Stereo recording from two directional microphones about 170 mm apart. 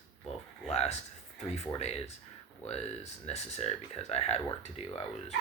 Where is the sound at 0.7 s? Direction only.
40° left (ahead or behind).